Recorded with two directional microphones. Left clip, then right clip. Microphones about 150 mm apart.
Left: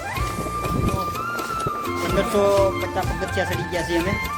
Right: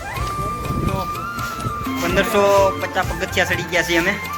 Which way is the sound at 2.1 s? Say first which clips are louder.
Right 4 dB; 20° left (ahead or behind).